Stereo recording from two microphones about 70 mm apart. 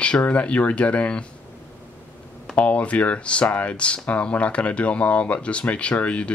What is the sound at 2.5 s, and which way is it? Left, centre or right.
Speech, centre.